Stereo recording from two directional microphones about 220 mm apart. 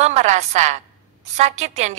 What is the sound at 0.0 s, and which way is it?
A woman's voice, 30° right (ahead or behind).